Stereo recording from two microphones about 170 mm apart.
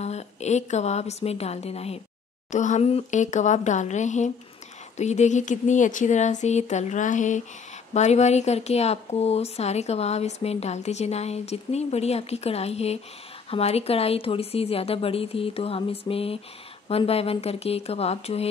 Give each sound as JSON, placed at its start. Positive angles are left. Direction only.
{"t": 0.0, "sound": "speech", "side_deg": 40}